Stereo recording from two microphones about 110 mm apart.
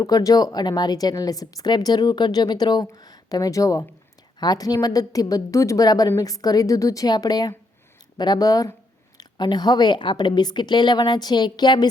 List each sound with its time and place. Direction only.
0.0 s a woman's voice: 35° left (ahead or behind)